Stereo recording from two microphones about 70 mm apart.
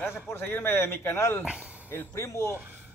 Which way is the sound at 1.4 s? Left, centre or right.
Centre.